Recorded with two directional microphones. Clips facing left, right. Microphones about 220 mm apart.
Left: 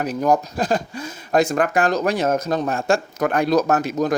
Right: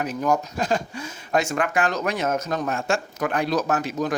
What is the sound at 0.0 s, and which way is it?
Speech, 40° left (ahead or behind).